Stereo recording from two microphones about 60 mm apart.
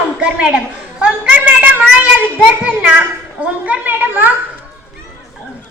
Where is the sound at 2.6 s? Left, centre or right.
Right.